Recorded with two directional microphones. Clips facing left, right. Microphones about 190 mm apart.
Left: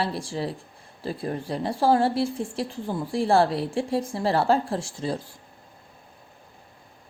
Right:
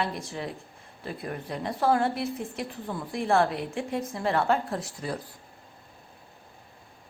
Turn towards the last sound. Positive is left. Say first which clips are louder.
# left 4 dB
turn(degrees=25)  # may be behind; listen again after turning